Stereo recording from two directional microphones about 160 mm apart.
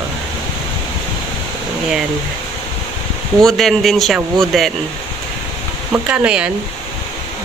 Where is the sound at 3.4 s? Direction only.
Centre (ahead or behind).